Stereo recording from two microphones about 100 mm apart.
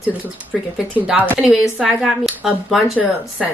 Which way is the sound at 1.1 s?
15° right (ahead or behind).